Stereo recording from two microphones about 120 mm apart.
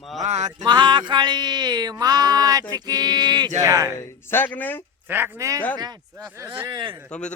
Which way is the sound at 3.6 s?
25° right (ahead or behind).